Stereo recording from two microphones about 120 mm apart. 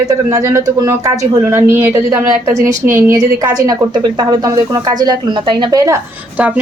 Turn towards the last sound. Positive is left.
turn(degrees=-40)  # may be behind; listen again after turning